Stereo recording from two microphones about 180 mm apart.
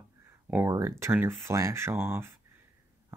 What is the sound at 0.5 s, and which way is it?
Speech, 15° right (ahead or behind).